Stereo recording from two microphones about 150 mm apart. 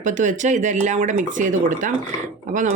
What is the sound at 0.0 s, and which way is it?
Speech, 55° right (ahead or behind).